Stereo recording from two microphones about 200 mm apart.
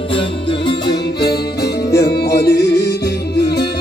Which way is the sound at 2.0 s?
55° left (ahead or behind).